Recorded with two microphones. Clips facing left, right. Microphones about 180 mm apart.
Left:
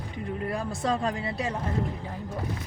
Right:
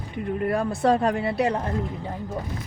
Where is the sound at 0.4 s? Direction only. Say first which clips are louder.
Right 8 dB; 60° right (ahead or behind).